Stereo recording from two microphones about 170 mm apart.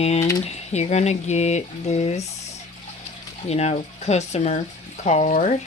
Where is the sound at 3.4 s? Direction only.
40° left (ahead or behind).